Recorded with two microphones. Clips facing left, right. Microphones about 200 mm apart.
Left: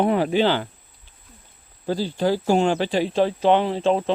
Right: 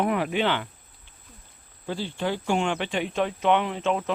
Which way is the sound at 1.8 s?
35° left (ahead or behind).